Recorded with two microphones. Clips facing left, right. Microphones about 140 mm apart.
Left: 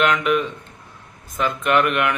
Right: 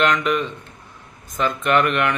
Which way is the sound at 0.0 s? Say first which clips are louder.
Left 1 dB; 5° left (ahead or behind).